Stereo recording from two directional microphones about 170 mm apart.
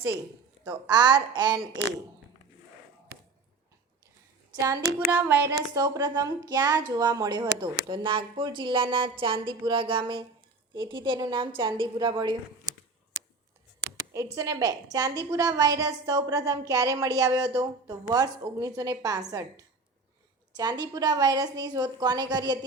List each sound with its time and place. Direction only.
0.7 s a woman's voice: 25° right (ahead or behind)
4.5 s a child's voice: 20° right (ahead or behind)
14.3 s a woman's voice: 20° right (ahead or behind)